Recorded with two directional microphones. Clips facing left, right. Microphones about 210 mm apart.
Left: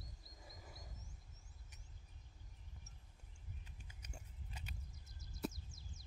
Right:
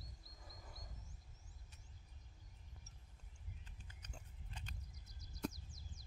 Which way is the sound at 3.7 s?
10° left (ahead or behind).